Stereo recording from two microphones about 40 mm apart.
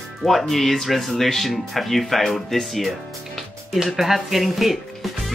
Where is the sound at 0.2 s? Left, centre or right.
Centre.